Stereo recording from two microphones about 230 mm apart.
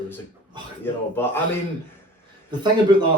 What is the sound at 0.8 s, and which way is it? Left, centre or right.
Speech, centre.